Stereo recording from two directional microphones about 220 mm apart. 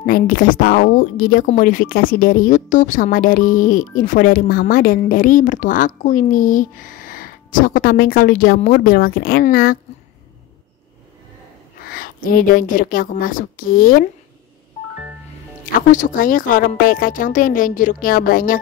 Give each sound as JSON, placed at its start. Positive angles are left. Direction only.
{"t": 0.0, "sound": "speech", "side_deg": 40}
{"t": 11.8, "sound": "a woman's voice", "side_deg": 40}
{"t": 15.9, "sound": "speech", "side_deg": 35}